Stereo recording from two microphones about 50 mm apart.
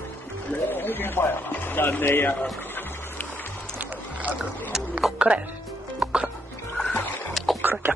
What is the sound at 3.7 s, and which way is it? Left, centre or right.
Music, right.